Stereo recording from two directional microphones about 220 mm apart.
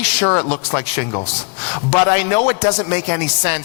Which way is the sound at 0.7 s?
15° left (ahead or behind).